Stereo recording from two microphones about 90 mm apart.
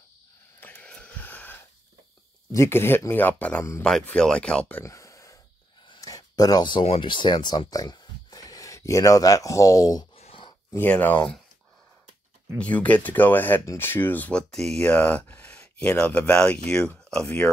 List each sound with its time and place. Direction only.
0.6 s a sound: 20° left (ahead or behind)
2.5 s speech: 30° left (ahead or behind); by 4.8 s 15° left (ahead or behind)
4.8 s a sound: 35° left (ahead or behind)
5.9 s speech: 40° left (ahead or behind)
10.9 s speech: 20° left (ahead or behind)
12.5 s speech: 15° left (ahead or behind)
14.5 s speech: 5° left (ahead or behind)